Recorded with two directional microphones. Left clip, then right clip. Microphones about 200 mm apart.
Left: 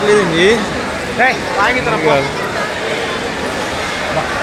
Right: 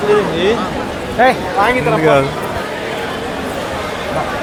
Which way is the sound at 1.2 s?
55° right (ahead or behind).